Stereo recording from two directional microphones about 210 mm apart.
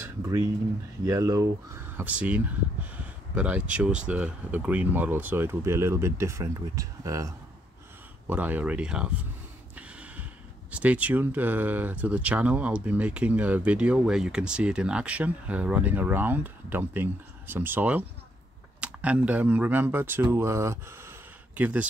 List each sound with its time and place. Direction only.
0.0 s speech: 15° right (ahead or behind)
9.8 s gasp: 5° right (ahead or behind)
10.7 s speech: 5° right (ahead or behind)